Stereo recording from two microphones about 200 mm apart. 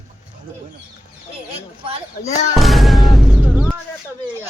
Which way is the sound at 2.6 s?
Centre (ahead or behind).